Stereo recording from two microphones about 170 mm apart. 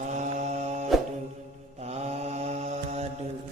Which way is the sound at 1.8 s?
40° right (ahead or behind).